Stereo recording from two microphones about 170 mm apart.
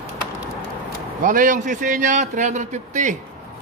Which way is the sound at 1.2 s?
50° right (ahead or behind).